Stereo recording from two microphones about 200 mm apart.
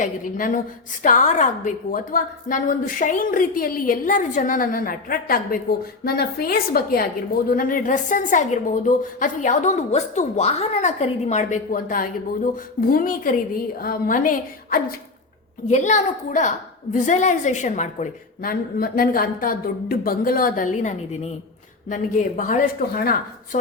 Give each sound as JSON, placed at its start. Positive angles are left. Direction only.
{"t": 0.0, "sound": "a woman's voice", "side_deg": 40}